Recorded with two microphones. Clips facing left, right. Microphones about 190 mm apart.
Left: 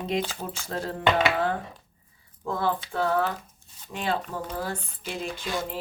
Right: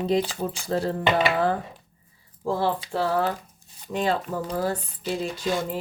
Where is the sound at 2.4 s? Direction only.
30° right (ahead or behind).